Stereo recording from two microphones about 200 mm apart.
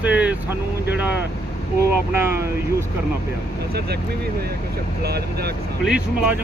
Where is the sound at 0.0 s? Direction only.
5° right (ahead or behind).